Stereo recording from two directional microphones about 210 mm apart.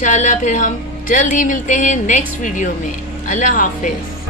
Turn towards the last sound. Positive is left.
turn(degrees=35)  # may be behind; listen again after turning